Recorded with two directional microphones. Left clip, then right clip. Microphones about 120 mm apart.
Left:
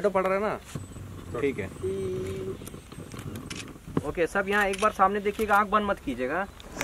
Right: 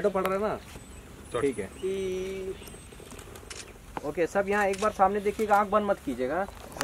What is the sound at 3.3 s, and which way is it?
Speech, 45° left (ahead or behind).